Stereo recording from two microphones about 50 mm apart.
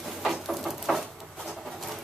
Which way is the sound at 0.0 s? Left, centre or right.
Centre.